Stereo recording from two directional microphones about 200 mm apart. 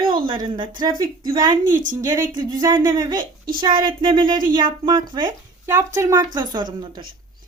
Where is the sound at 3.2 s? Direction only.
45° right (ahead or behind).